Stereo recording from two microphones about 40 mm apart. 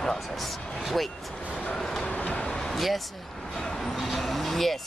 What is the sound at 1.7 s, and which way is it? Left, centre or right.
Train, centre.